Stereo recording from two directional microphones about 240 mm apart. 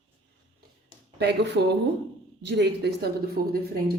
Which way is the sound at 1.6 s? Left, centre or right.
Right.